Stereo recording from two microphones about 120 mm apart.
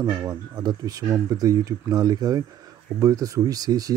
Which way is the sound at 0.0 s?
30° right (ahead or behind).